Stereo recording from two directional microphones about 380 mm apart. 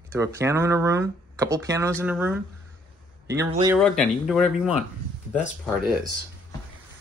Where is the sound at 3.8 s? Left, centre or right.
Centre.